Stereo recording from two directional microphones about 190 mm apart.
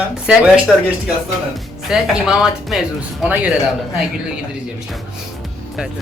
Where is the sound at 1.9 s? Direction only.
5° right (ahead or behind).